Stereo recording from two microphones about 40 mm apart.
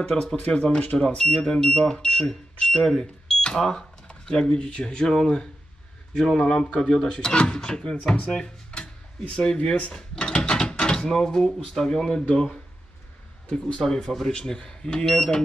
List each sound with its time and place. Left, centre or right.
0.0 s speech: centre
0.7 s speech: left
1.0 s speech: left
2.8 s speech: centre
4.5 s speech: left
8.2 s speech: left; by 12.3 s centre
13.5 s speech: left